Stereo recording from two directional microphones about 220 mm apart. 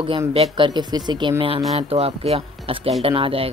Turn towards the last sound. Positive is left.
turn(degrees=-25)  # may be behind; listen again after turning